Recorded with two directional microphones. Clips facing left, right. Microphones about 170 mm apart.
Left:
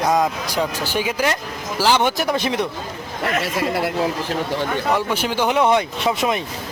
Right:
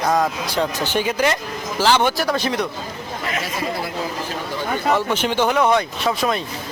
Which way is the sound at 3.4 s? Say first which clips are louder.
Left 4 dB; 70° left (ahead or behind).